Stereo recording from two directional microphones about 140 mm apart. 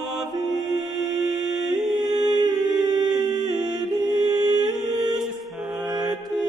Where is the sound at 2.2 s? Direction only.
30° right (ahead or behind).